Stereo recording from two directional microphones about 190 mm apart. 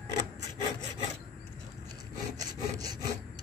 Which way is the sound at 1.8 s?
20° right (ahead or behind).